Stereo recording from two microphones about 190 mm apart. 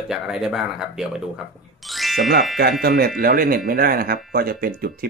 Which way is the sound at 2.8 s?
55° right (ahead or behind).